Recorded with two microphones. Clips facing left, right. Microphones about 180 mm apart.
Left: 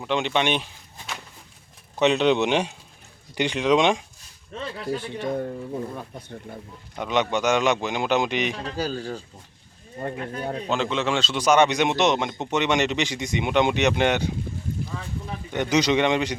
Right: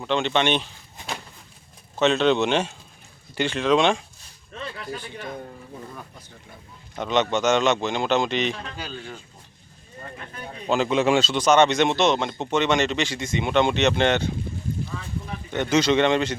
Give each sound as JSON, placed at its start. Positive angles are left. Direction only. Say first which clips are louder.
{"t": 0.0, "sound": "speech", "louder": "right 1 dB", "side_deg": 10}
{"t": 2.0, "sound": "speech", "louder": "even", "side_deg": 15}
{"t": 4.5, "sound": "speech", "louder": "left 4 dB", "side_deg": 25}
{"t": 7.0, "sound": "speech", "louder": "right 1 dB", "side_deg": 10}
{"t": 8.5, "sound": "speech", "louder": "left 7 dB", "side_deg": 40}
{"t": 10.0, "sound": "speech", "louder": "left 9 dB", "side_deg": 65}
{"t": 10.7, "sound": "speech", "louder": "right 6 dB", "side_deg": -10}
{"t": 11.3, "sound": "speech", "louder": "left 1 dB", "side_deg": 10}
{"t": 15.5, "sound": "speech", "louder": "right 1 dB", "side_deg": 15}